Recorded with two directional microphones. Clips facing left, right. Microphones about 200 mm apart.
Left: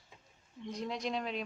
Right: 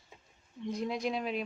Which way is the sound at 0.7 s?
10° right (ahead or behind).